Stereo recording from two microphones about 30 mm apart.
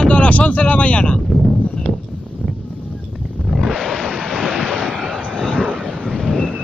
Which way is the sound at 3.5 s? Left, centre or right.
Centre.